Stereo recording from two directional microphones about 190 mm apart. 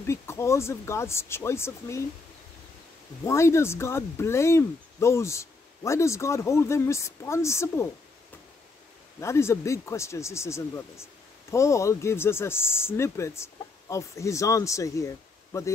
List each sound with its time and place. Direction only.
0.0 s speech: 15° left (ahead or behind)
3.3 s speech: 15° left (ahead or behind)
9.2 s speech: 15° left (ahead or behind)